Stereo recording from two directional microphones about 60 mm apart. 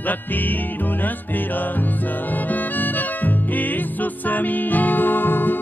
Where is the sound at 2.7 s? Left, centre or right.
Left.